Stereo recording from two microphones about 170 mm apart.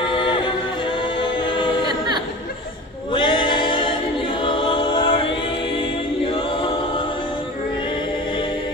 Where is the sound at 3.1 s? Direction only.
30° left (ahead or behind).